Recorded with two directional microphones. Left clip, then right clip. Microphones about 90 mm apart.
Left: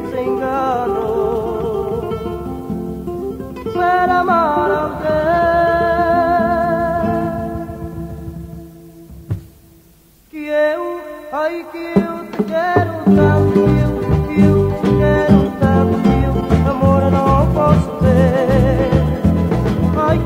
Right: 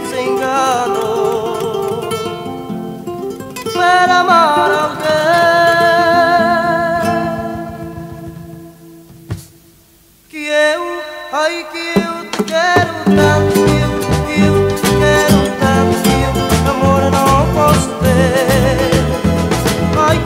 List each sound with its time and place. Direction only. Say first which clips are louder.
0.0 s music: right 3 dB; 25° right (ahead or behind)
3.6 s music: right 4 dB; 30° right (ahead or behind)
10.4 s a sound: right 3 dB; 25° right (ahead or behind)
11.3 s music: right 4 dB; 30° right (ahead or behind)